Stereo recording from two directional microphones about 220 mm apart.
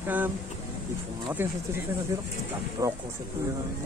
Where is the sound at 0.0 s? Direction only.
10° right (ahead or behind).